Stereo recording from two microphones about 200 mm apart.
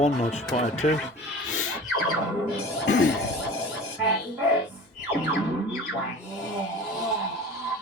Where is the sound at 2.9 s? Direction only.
75° left (ahead or behind).